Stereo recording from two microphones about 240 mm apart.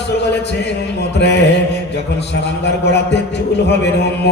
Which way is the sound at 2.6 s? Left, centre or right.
Left.